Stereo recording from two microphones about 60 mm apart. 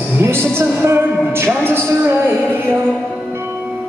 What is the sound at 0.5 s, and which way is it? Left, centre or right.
Music, right.